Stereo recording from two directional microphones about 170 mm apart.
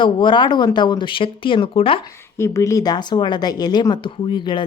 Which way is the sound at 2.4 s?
15° left (ahead or behind).